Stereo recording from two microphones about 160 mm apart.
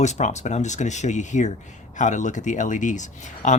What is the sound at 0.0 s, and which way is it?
Speech, 45° left (ahead or behind).